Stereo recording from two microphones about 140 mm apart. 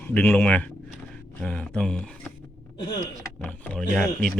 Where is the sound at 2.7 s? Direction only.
35° left (ahead or behind).